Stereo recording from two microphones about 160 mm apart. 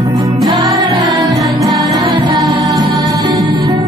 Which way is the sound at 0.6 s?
25° right (ahead or behind).